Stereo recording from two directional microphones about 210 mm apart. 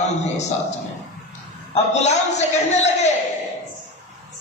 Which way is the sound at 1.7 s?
30° left (ahead or behind).